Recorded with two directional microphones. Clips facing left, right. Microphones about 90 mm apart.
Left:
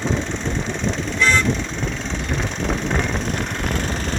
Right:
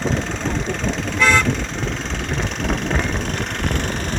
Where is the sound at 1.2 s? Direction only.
65° right (ahead or behind).